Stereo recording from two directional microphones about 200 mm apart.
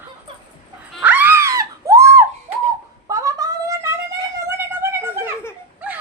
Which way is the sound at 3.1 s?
15° right (ahead or behind).